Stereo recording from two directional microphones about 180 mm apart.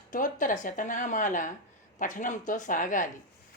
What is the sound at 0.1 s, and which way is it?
Speech, 45° left (ahead or behind).